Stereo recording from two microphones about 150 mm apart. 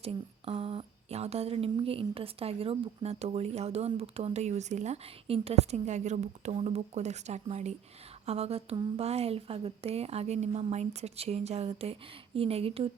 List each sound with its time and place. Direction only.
0.0 s speech: 40° right (ahead or behind)